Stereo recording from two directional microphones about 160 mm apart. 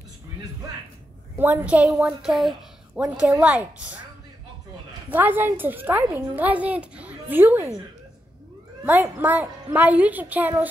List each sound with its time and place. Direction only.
1.4 s a woman's voice: 10° right (ahead or behind)
5.1 s a woman's voice: 10° right (ahead or behind)
8.8 s a woman's voice: 15° right (ahead or behind)